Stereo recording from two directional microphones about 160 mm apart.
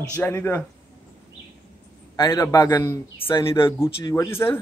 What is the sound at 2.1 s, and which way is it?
A man's voice, 25° left (ahead or behind).